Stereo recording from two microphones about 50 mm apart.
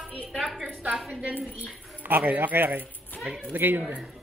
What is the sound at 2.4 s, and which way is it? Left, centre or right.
Speech, right.